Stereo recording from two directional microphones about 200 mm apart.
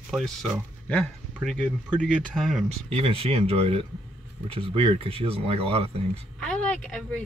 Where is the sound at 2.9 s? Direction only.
30° right (ahead or behind).